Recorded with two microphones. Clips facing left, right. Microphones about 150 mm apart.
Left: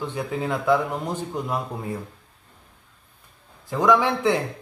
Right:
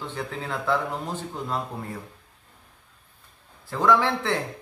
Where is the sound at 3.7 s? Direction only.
15° left (ahead or behind).